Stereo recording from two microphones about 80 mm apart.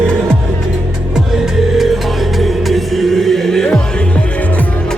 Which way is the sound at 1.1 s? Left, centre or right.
Centre.